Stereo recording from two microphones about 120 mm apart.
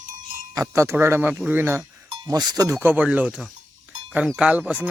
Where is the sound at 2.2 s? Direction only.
35° right (ahead or behind).